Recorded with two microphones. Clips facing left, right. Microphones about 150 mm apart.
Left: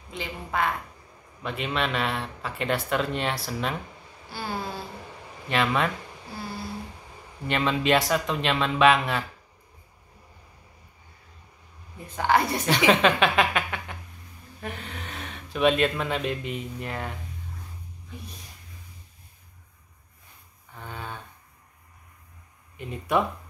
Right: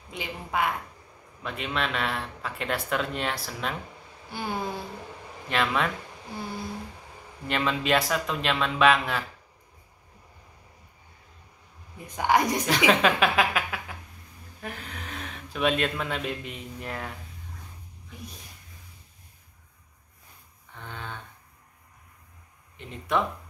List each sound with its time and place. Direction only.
0.1 s speech: 10° right (ahead or behind)
1.4 s speech: centre (ahead or behind)
4.3 s speech: 15° right (ahead or behind)
5.5 s speech: centre (ahead or behind)
7.4 s speech: centre (ahead or behind)
12.1 s speech: 15° right (ahead or behind)
12.6 s a woman's voice: centre (ahead or behind)
20.7 s a sound: 5° left (ahead or behind)
22.8 s speech: 10° left (ahead or behind)